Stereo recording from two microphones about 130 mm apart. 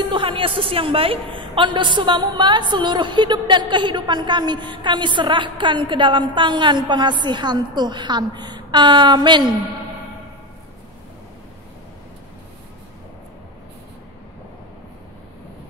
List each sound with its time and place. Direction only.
0.1 s a woman's voice: 45° right (ahead or behind)